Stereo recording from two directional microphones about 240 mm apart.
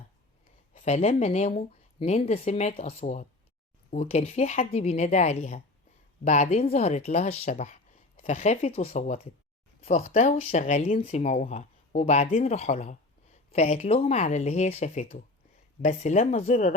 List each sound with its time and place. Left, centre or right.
0.7 s speech: left